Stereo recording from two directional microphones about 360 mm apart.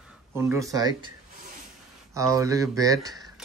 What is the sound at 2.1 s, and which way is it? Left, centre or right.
Speech, centre.